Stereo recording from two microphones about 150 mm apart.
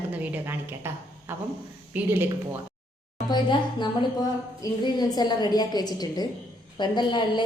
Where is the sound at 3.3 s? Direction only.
30° left (ahead or behind).